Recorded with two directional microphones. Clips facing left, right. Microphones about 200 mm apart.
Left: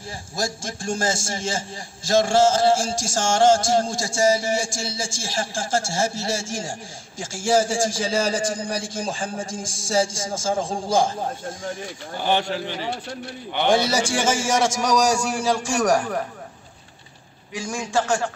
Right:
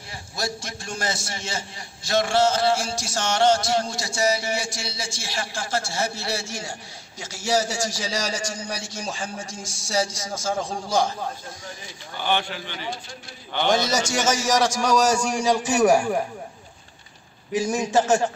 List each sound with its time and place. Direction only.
0.4 s a sound: 45° left (ahead or behind)
12.2 s a man's voice: 35° left (ahead or behind)
13.7 s a man's voice: 10° left (ahead or behind)
14.3 s speech: 25° left (ahead or behind)
15.2 s a man's voice: centre (ahead or behind)
17.6 s a man's voice: 20° right (ahead or behind)